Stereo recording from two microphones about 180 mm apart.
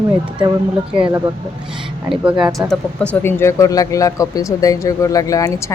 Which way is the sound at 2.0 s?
5° right (ahead or behind).